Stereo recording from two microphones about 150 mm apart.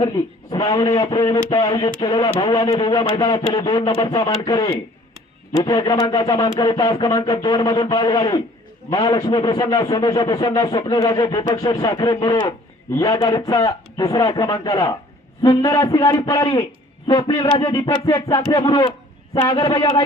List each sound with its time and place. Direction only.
0.6 s a man's voice: 25° left (ahead or behind)